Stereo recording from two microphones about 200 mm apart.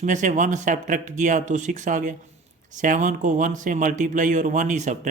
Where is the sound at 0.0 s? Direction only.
40° right (ahead or behind).